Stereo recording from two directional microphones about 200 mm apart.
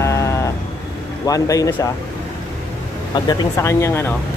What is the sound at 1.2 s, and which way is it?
Speech, 15° left (ahead or behind).